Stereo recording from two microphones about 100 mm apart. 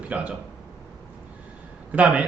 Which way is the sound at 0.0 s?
15° right (ahead or behind).